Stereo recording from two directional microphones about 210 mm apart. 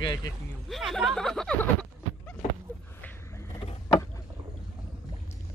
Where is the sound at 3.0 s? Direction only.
10° left (ahead or behind).